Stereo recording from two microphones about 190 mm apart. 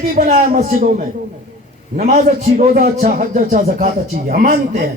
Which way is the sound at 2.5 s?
50° right (ahead or behind).